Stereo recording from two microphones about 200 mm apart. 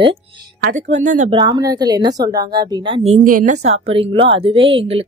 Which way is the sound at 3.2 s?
40° right (ahead or behind).